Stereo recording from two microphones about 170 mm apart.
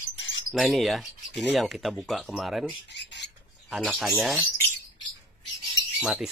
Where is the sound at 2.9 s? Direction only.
90° left.